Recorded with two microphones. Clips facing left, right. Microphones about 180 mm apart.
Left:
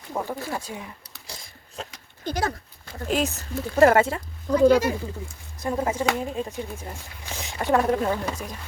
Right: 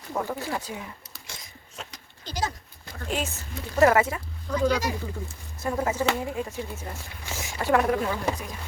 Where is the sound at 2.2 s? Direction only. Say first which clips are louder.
Left 4 dB; 60° left (ahead or behind).